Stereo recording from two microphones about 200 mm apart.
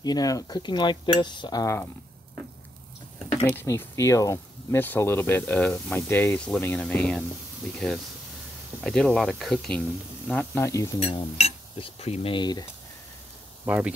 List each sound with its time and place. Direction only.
0.0 s speech: 20° left (ahead or behind)
3.4 s speech: 10° left (ahead or behind)
8.8 s speech: centre (ahead or behind)
11.0 s speech: 30° left (ahead or behind)
13.7 s speech: 10° right (ahead or behind)